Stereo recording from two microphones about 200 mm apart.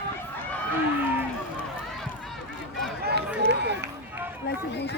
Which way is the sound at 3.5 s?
55° right (ahead or behind).